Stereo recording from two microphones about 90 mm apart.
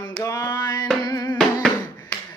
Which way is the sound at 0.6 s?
40° left (ahead or behind).